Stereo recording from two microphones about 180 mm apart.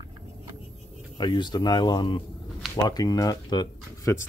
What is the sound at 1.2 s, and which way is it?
Speech, 25° left (ahead or behind).